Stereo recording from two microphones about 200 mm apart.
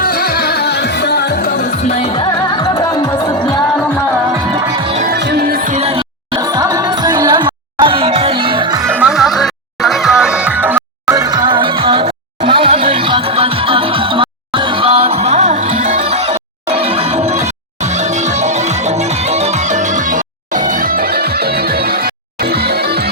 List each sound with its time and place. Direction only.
0.0 s music: 50° left (ahead or behind)
1.9 s music: 25° left (ahead or behind)
4.5 s music: 25° right (ahead or behind)
5.1 s music: 55° right (ahead or behind); by 8.9 s 20° right (ahead or behind)
8.9 s music: 5° right (ahead or behind); by 23.0 s 55° right (ahead or behind)